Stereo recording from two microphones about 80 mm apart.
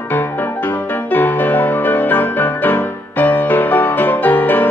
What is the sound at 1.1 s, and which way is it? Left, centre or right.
Music, left.